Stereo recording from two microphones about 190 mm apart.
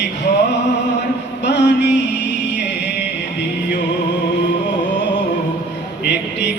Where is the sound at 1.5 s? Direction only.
65° left (ahead or behind).